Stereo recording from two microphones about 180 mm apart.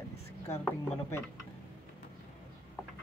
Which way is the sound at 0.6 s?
15° left (ahead or behind).